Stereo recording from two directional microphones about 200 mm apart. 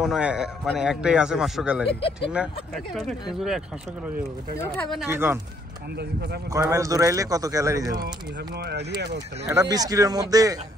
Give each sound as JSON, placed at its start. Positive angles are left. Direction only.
{"t": 0.0, "sound": "a man's voice", "side_deg": -5}
{"t": 1.9, "sound": "speech", "side_deg": 30}
{"t": 2.3, "sound": "a man's voice", "side_deg": -5}
{"t": 5.0, "sound": "speech", "side_deg": -10}
{"t": 6.7, "sound": "speech", "side_deg": -15}
{"t": 8.5, "sound": "speech", "side_deg": -55}
{"t": 9.5, "sound": "speech", "side_deg": -15}